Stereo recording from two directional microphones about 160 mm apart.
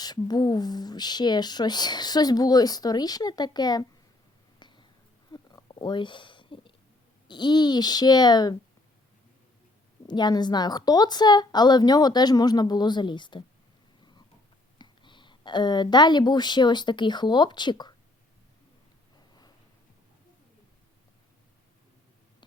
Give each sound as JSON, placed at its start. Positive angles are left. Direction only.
{"t": 0.0, "sound": "speech", "side_deg": 25}
{"t": 4.6, "sound": "a sound", "side_deg": 30}
{"t": 7.3, "sound": "speech", "side_deg": 25}
{"t": 10.1, "sound": "speech", "side_deg": 25}
{"t": 14.0, "sound": "a sound", "side_deg": 30}
{"t": 14.8, "sound": "a woman's voice", "side_deg": 30}